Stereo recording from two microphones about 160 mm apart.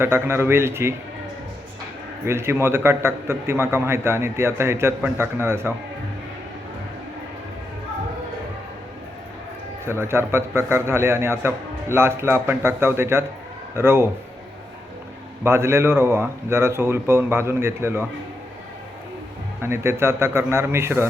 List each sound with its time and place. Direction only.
0.0 s a man's voice: 15° right (ahead or behind)
2.2 s a man's voice: 15° right (ahead or behind)
9.8 s a man's voice: 15° right (ahead or behind)
15.4 s a man's voice: 15° right (ahead or behind)
19.6 s a man's voice: 15° right (ahead or behind)